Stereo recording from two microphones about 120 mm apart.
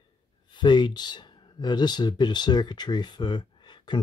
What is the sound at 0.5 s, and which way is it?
Speech, 40° left (ahead or behind).